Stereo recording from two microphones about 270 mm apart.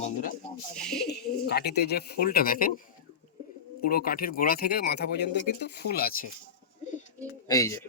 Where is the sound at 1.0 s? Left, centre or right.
Left.